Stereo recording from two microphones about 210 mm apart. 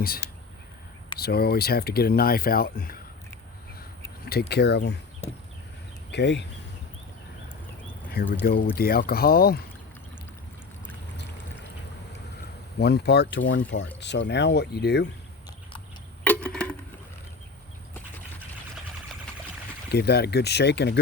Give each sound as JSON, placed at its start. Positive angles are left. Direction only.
{"t": 1.2, "sound": "speech", "side_deg": 50}
{"t": 4.3, "sound": "speech", "side_deg": 50}
{"t": 6.1, "sound": "speech", "side_deg": 55}
{"t": 8.1, "sound": "speech", "side_deg": 45}
{"t": 12.8, "sound": "speech", "side_deg": 50}
{"t": 16.2, "sound": "a sound", "side_deg": 5}
{"t": 19.9, "sound": "speech", "side_deg": 50}